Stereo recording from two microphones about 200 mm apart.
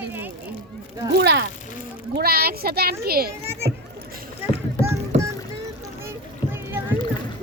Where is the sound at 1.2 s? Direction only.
55° right (ahead or behind).